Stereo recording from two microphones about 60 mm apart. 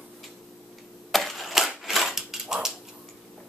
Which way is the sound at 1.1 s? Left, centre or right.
Centre.